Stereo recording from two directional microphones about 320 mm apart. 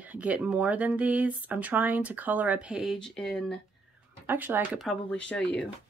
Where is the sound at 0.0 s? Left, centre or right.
Centre.